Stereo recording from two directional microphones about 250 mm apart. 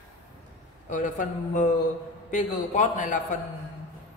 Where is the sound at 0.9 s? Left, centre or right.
Left.